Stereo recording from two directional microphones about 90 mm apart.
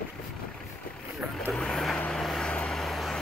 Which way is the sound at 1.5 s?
5° left (ahead or behind).